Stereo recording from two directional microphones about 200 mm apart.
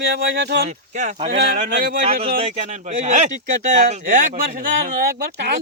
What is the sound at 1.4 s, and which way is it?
Speech, 55° right (ahead or behind).